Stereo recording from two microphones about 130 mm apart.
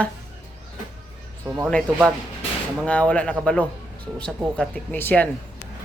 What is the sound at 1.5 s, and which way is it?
Speech, 15° right (ahead or behind).